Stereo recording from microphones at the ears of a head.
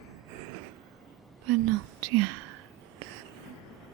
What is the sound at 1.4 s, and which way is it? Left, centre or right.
Whispering, right.